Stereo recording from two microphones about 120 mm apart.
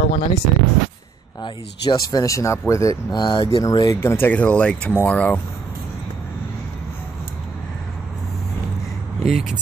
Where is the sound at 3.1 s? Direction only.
40° left (ahead or behind).